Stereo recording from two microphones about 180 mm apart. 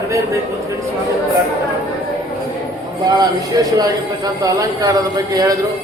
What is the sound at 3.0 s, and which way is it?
A man's voice, 20° right (ahead or behind).